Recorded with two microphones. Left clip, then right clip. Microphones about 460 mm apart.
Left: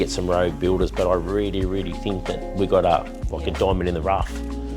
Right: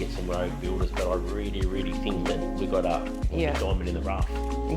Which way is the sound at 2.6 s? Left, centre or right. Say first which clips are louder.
Left 11 dB; left.